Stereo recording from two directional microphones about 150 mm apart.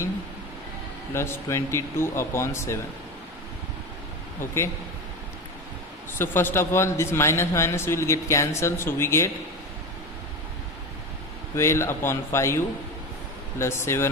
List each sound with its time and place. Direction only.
1.1 s a man's voice: 15° left (ahead or behind)
4.4 s a man's voice: 20° left (ahead or behind)
6.1 s a man's voice: 15° left (ahead or behind)
11.5 s a man's voice: 20° left (ahead or behind)
13.6 s a man's voice: 15° left (ahead or behind)